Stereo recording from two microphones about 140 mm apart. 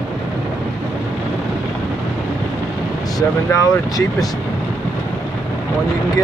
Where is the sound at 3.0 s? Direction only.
25° left (ahead or behind).